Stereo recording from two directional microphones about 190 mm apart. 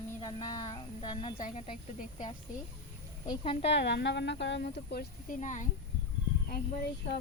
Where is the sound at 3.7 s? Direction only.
65° left (ahead or behind).